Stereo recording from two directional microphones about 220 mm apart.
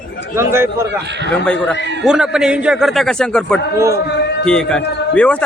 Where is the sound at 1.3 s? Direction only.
5° left (ahead or behind).